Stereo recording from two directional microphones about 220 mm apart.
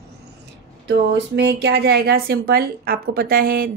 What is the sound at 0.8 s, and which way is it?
Speech, 55° right (ahead or behind).